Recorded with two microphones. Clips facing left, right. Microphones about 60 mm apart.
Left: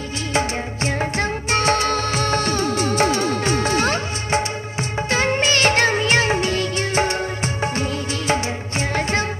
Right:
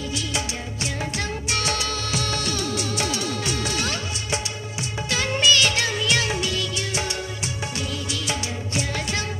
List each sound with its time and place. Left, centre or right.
0.3 s music of bollywood: left
5.1 s music: left